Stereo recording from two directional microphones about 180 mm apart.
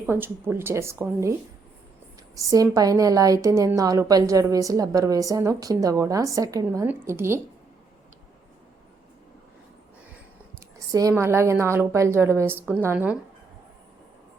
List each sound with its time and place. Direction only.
0.0 s a woman's voice: 10° right (ahead or behind)
2.3 s a woman's voice: 20° right (ahead or behind)
10.8 s a sound: 20° right (ahead or behind)
11.1 s a woman's voice: 15° right (ahead or behind)